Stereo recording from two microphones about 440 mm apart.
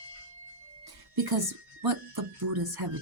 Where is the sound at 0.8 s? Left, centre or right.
Right.